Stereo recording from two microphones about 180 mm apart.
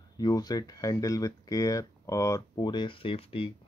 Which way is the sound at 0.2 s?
20° left (ahead or behind).